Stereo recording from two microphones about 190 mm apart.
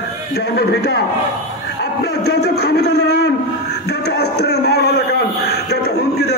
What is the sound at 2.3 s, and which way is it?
A man's voice, 55° left (ahead or behind).